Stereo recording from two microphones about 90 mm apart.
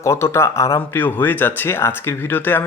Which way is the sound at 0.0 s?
30° left (ahead or behind).